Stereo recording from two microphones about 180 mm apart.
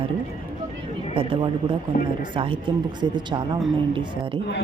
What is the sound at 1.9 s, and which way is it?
Speech, 45° left (ahead or behind).